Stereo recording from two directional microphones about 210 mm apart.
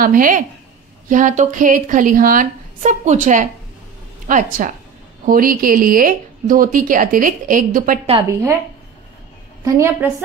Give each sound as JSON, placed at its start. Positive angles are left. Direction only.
{"t": 0.0, "sound": "speech", "side_deg": -40}
{"t": 8.3, "sound": "a woman's voice", "side_deg": -15}
{"t": 9.7, "sound": "a woman's voice", "side_deg": -10}